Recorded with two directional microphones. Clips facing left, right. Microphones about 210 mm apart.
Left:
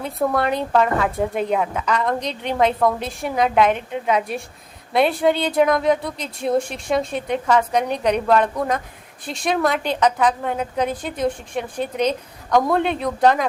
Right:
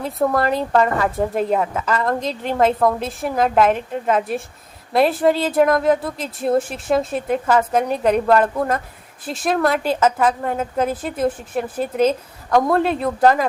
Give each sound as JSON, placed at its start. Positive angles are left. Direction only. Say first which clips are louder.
{"t": 0.0, "sound": "a woman's voice", "louder": "right 2 dB", "side_deg": 0}